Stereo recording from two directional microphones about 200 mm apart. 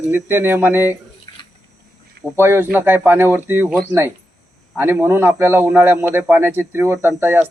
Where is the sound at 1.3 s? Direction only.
20° left (ahead or behind).